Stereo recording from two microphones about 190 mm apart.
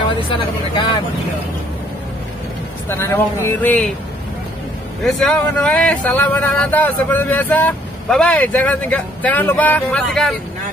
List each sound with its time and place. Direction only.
0.3 s speech: 25° left (ahead or behind)
2.9 s speech: 15° left (ahead or behind)
5.0 s speech: 5° left (ahead or behind)